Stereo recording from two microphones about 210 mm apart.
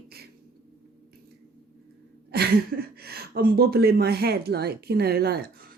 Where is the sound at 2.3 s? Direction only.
50° right (ahead or behind).